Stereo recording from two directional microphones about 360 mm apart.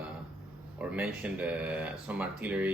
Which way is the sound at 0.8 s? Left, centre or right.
Centre.